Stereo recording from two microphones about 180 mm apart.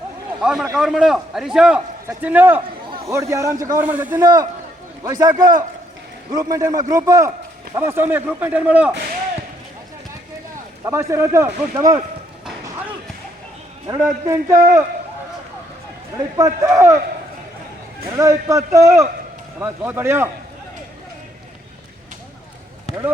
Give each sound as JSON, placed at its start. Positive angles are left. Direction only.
{"t": 0.3, "sound": "a man's voice", "side_deg": -5}
{"t": 10.8, "sound": "a man's voice", "side_deg": -15}
{"t": 13.8, "sound": "a man's voice", "side_deg": -20}
{"t": 16.1, "sound": "a man's voice", "side_deg": -15}
{"t": 18.2, "sound": "a man's voice", "side_deg": -15}
{"t": 22.9, "sound": "speech", "side_deg": 40}